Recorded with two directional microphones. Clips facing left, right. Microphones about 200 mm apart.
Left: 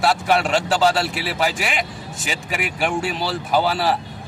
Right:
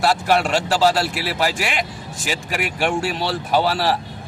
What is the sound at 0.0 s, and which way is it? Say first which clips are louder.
A man's voice: right 1 dB; centre (ahead or behind).